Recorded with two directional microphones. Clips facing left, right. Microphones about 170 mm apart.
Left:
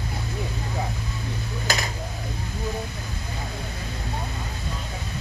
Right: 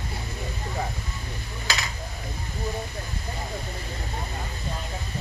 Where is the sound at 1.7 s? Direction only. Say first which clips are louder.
Left 3 dB; 50° left (ahead or behind).